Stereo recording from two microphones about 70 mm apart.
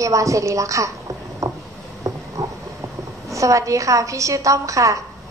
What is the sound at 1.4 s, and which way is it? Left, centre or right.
Boat, right.